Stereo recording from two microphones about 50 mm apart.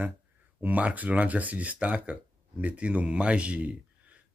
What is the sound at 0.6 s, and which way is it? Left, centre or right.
Speech, right.